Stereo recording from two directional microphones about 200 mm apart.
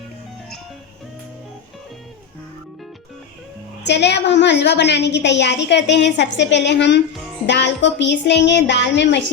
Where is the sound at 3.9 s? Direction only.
60° left (ahead or behind).